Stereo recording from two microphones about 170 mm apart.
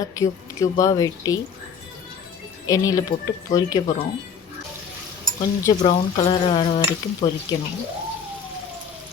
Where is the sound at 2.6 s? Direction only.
20° left (ahead or behind).